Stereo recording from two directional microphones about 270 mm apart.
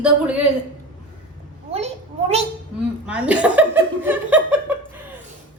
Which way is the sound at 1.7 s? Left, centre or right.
Right.